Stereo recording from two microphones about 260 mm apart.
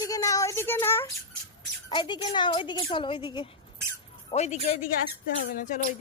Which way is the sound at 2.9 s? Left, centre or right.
Centre.